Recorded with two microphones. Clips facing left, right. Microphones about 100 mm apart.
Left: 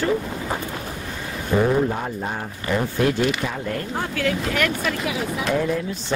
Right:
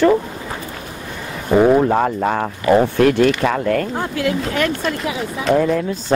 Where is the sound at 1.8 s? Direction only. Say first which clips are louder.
Right 10 dB; 75° right (ahead or behind).